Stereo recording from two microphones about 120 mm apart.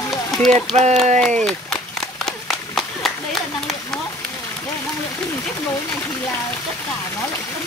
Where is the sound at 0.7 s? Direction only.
70° right (ahead or behind).